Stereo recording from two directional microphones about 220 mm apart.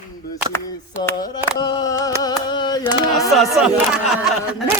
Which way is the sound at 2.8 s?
Centre (ahead or behind).